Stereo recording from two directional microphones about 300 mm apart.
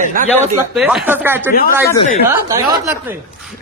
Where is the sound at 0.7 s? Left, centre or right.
Centre.